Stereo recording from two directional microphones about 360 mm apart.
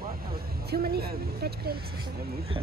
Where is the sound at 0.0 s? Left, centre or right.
Right.